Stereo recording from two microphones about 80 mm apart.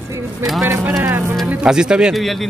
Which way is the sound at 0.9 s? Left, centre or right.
Right.